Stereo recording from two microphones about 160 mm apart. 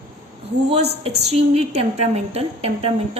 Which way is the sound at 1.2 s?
40° right (ahead or behind).